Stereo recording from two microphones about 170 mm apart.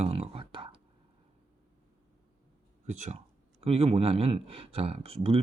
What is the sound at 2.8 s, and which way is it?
Speech, 45° right (ahead or behind).